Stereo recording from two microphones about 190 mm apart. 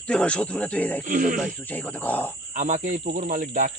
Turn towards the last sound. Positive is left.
turn(degrees=-45)  # may be behind; listen again after turning